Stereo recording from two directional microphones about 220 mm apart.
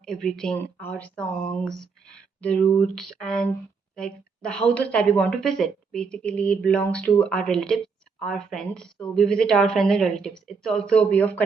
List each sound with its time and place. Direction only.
0.0 s a woman's voice: centre (ahead or behind)